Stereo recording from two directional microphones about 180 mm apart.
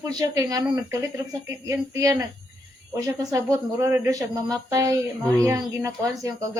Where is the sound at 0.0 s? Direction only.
20° right (ahead or behind).